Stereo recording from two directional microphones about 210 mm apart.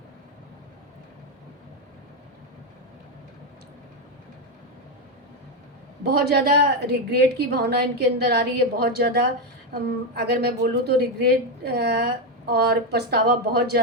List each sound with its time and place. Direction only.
6.1 s a woman's voice: 50° right (ahead or behind)